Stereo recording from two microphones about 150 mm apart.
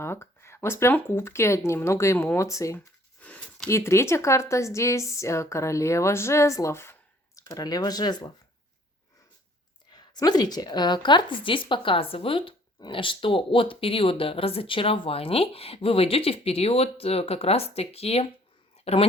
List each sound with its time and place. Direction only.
0.0 s speech: 15° left (ahead or behind)
3.2 s a sound: 10° left (ahead or behind)
3.7 s a woman's voice: 20° left (ahead or behind)
9.9 s a woman's voice: 25° left (ahead or behind); by 19.0 s 40° left (ahead or behind)